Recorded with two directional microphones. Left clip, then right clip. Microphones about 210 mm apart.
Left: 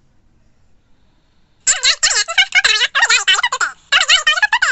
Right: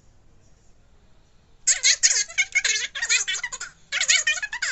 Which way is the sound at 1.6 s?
40° left (ahead or behind).